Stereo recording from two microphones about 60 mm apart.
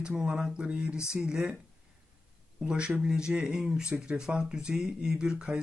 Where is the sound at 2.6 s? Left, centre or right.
Centre.